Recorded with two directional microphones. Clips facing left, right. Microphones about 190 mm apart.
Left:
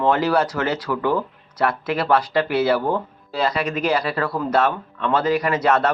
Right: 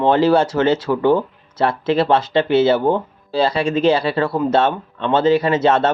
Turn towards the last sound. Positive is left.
turn(degrees=-25)  # may be behind; listen again after turning